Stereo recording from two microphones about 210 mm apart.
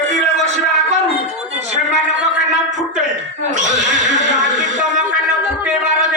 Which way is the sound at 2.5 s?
35° right (ahead or behind).